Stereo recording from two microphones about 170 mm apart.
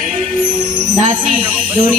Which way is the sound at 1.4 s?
10° right (ahead or behind).